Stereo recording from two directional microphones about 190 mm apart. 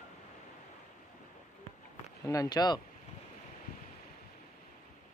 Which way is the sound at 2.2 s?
20° left (ahead or behind).